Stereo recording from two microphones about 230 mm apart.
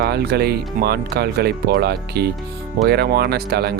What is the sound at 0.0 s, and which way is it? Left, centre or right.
Speech, right.